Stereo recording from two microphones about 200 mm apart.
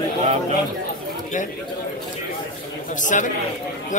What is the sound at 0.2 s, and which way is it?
Speech, 35° right (ahead or behind).